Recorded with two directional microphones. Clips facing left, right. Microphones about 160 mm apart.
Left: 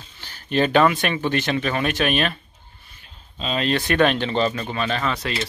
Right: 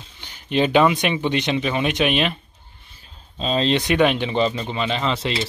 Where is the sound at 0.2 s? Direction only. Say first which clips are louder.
Right 1 dB; 15° right (ahead or behind).